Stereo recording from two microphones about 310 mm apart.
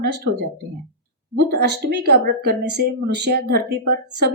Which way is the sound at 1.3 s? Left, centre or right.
Right.